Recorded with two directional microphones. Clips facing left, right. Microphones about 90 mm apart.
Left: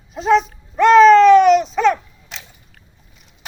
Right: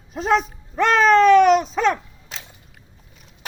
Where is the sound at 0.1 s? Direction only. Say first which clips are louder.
Left 4 dB; 45° right (ahead or behind).